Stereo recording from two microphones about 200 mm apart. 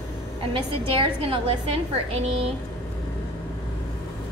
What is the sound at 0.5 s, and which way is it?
A woman's voice, 25° right (ahead or behind).